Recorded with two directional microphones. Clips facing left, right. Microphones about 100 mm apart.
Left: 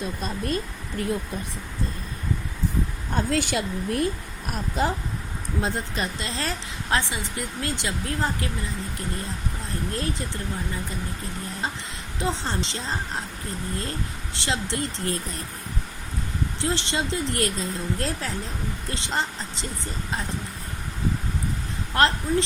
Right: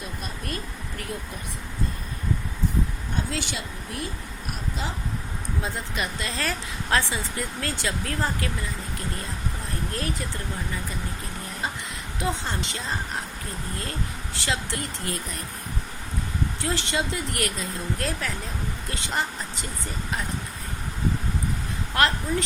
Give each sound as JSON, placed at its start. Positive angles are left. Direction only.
{"t": 0.2, "sound": "speech", "side_deg": 30}
{"t": 3.2, "sound": "speech", "side_deg": 50}
{"t": 5.9, "sound": "speech", "side_deg": 30}
{"t": 9.9, "sound": "speech", "side_deg": 25}
{"t": 12.2, "sound": "speech", "side_deg": 30}
{"t": 14.3, "sound": "speech", "side_deg": 25}
{"t": 16.6, "sound": "speech", "side_deg": 25}
{"t": 21.9, "sound": "speech", "side_deg": 30}